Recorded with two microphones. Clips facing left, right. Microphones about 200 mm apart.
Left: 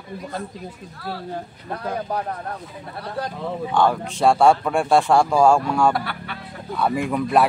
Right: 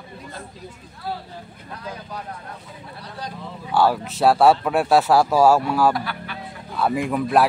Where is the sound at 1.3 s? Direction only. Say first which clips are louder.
Left 7 dB; 60° left (ahead or behind).